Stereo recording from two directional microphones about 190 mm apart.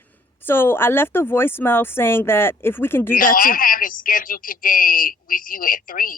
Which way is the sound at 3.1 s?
50° left (ahead or behind).